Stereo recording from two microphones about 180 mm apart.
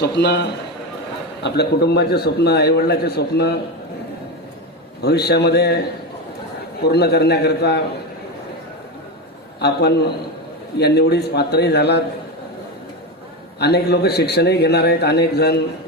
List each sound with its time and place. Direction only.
0.0 s a man's voice: 70° left (ahead or behind)
5.0 s a man's voice: 65° left (ahead or behind)
6.8 s a man's voice: 65° left (ahead or behind)
9.6 s a man's voice: 65° left (ahead or behind)
13.6 s a man's voice: 65° left (ahead or behind)